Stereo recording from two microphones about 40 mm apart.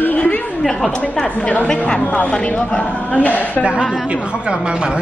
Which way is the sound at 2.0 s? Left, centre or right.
Left.